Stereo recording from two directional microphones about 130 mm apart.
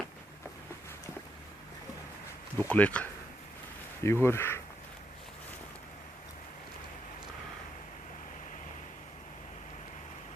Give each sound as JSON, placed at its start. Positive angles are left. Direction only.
{"t": 2.6, "sound": "speech", "side_deg": 10}